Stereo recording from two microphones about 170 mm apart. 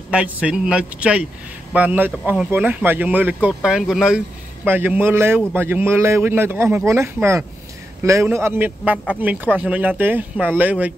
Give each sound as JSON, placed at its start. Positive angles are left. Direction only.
{"t": 0.1, "sound": "speech", "side_deg": -5}
{"t": 8.9, "sound": "speech", "side_deg": 5}
{"t": 9.2, "sound": "speech", "side_deg": -10}